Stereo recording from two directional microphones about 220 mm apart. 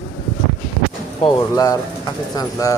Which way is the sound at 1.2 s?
15° left (ahead or behind).